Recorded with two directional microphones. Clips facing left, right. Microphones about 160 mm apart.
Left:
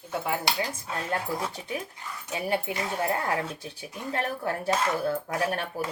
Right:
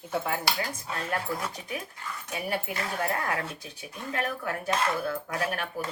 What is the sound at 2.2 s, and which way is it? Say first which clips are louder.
Speech: left 4 dB; 25° left (ahead or behind).